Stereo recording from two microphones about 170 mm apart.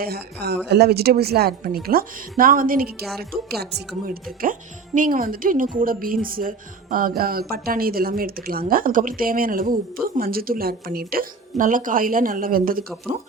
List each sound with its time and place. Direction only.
0.0 s a woman's voice: 65° right (ahead or behind)